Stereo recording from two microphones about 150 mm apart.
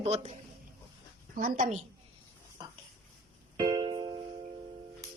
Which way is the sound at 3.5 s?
30° right (ahead or behind).